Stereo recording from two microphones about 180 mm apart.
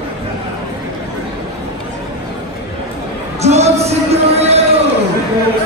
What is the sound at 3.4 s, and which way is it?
Music, 35° right (ahead or behind).